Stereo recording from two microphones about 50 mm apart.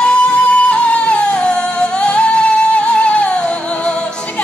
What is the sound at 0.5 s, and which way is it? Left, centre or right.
Music, left.